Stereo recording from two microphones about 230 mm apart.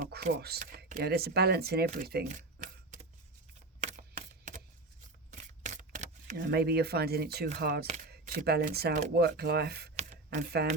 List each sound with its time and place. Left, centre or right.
0.0 s speech: right
3.9 s typewriter: right
5.3 s camera: right
6.3 s speech: right
9.9 s a sound: right
10.2 s speech: right